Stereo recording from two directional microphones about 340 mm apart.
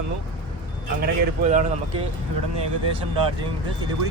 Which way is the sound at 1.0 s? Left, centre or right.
Right.